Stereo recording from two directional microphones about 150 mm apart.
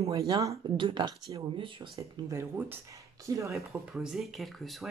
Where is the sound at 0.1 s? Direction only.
20° right (ahead or behind).